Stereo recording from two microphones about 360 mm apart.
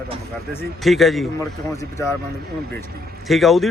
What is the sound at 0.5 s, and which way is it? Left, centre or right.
Speech, centre.